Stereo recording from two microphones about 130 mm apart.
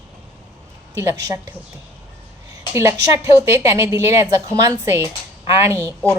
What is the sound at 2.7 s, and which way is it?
A woman's voice, 20° right (ahead or behind).